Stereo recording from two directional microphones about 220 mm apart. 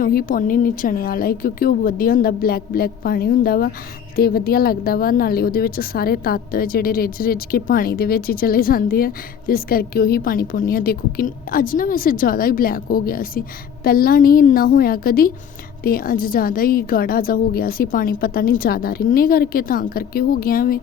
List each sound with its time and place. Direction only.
0.0 s a woman's voice: 40° left (ahead or behind)